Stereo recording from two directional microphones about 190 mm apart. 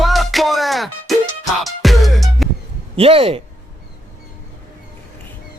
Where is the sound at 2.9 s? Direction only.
30° right (ahead or behind).